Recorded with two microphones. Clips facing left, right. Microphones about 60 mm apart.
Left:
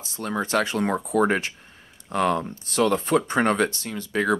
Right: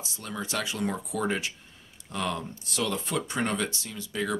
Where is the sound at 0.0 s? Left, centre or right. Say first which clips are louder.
Left 8 dB; left.